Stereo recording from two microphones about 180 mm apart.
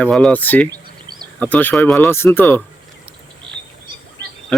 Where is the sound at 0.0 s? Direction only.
5° left (ahead or behind).